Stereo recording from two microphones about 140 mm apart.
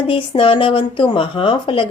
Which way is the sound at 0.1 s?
40° left (ahead or behind).